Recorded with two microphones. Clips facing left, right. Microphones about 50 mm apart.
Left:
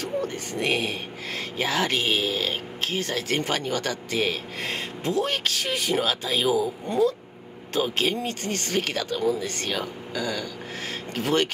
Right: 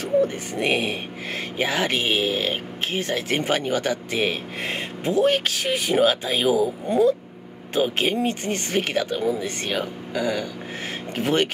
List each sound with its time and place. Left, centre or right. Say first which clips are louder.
0.0 s speech: right 7 dB; centre